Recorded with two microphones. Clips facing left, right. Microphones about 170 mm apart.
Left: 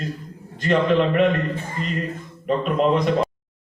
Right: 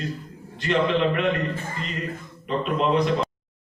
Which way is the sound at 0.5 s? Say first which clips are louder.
Left 4 dB; 45° left (ahead or behind).